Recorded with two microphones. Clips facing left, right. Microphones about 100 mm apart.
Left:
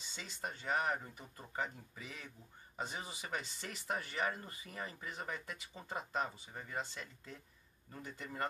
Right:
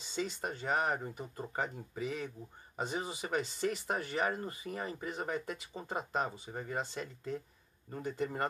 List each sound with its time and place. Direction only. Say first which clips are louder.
0.1 s speech: right 9 dB; 45° right (ahead or behind)
1.0 s speech: right 10 dB; 30° right (ahead or behind)
1.6 s speech: right 5 dB; 50° right (ahead or behind)
3.8 s speech: right 4 dB; 40° right (ahead or behind)
5.9 s speech: right 4 dB; 25° right (ahead or behind)
6.2 s speech: right 6 dB; 40° right (ahead or behind)